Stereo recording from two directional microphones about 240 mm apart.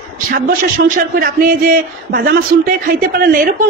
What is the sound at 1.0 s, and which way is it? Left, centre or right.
A woman's voice, right.